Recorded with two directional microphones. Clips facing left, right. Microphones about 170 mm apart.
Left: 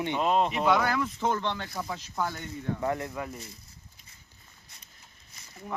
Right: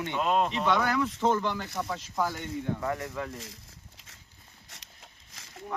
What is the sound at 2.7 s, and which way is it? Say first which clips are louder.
Speech: left 2 dB; 25° left (ahead or behind).